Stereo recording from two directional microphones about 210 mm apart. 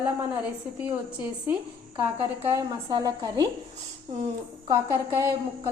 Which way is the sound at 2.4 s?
15° right (ahead or behind).